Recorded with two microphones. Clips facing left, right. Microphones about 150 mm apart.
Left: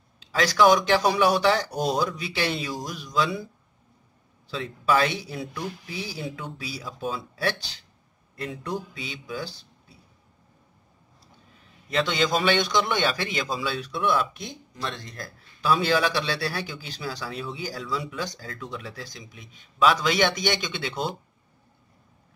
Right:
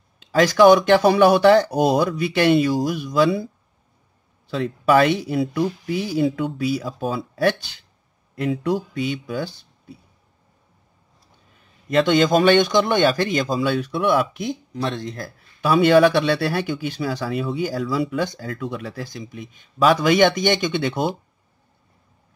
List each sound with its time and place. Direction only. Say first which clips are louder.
0.2 s speech: right 7 dB; 50° right (ahead or behind)
4.5 s speech: right 6 dB; 60° right (ahead or behind)
8.9 s speech: right 10 dB; 55° right (ahead or behind)
11.9 s a man's voice: right 8 dB; 50° right (ahead or behind)